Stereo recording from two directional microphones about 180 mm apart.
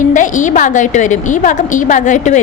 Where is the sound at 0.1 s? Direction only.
45° left (ahead or behind).